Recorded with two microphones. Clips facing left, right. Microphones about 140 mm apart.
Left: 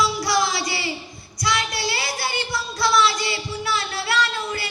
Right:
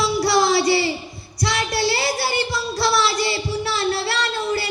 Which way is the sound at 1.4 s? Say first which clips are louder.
Right 3 dB; 30° right (ahead or behind).